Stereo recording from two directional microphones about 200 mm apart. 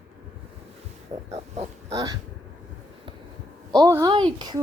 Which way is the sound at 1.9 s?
15° right (ahead or behind).